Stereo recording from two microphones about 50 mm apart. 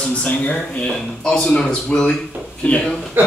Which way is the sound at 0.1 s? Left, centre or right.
Left.